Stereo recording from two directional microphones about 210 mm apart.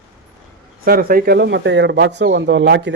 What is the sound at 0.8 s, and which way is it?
A man's voice, 45° right (ahead or behind).